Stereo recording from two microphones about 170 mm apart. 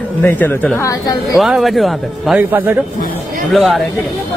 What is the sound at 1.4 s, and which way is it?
Speech, centre (ahead or behind).